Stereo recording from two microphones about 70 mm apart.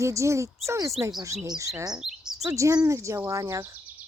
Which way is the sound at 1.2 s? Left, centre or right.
Right.